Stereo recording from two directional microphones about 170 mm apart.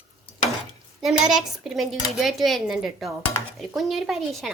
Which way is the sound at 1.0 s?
5° right (ahead or behind).